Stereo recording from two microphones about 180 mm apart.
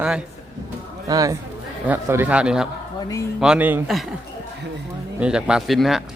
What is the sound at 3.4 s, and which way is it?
Speech, 5° right (ahead or behind).